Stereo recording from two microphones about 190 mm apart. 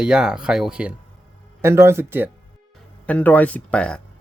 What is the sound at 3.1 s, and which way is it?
Speech, 10° left (ahead or behind).